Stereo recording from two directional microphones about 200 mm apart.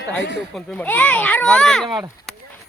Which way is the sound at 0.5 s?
10° left (ahead or behind).